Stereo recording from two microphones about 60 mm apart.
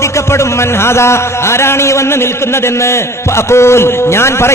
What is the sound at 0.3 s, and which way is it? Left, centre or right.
A man's voice, left.